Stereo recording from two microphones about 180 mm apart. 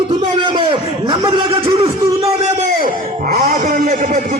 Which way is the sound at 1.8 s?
30° right (ahead or behind).